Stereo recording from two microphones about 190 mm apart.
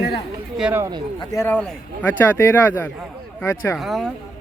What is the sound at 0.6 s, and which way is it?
Speech, 5° right (ahead or behind).